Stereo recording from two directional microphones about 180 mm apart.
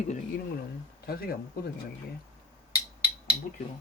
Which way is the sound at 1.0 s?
55° left (ahead or behind).